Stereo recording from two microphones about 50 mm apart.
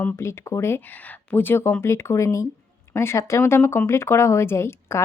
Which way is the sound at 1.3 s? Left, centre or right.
Left.